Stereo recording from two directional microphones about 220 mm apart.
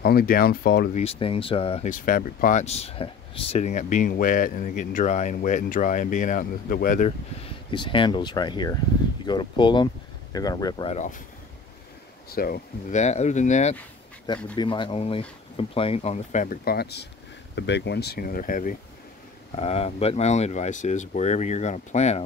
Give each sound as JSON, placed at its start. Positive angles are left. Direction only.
{"t": 0.0, "sound": "speech", "side_deg": 40}
{"t": 0.9, "sound": "speech", "side_deg": 25}
{"t": 7.7, "sound": "speech", "side_deg": 20}
{"t": 12.3, "sound": "speech", "side_deg": 40}
{"t": 14.2, "sound": "speech", "side_deg": 20}